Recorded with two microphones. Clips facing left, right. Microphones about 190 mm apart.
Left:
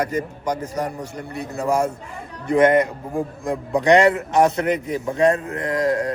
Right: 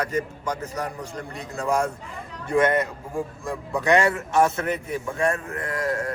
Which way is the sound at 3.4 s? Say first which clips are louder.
Left 6 dB; 20° left (ahead or behind).